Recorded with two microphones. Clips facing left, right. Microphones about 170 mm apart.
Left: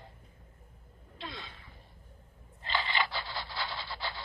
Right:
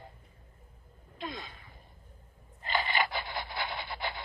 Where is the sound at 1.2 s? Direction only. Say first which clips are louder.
Right 4 dB; 45° right (ahead or behind).